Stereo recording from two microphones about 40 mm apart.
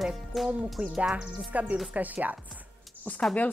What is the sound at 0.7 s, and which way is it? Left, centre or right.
Speech, right.